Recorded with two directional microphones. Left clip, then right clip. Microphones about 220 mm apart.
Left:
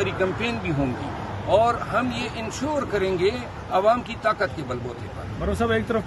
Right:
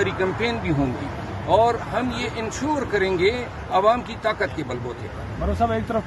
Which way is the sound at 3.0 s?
5° left (ahead or behind).